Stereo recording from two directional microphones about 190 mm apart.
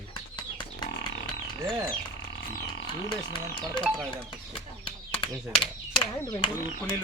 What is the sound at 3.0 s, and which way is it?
Speech, 25° left (ahead or behind).